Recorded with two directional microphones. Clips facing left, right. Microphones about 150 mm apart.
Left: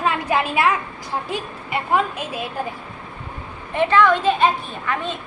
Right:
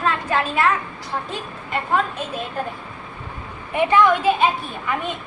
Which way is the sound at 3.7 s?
15° right (ahead or behind).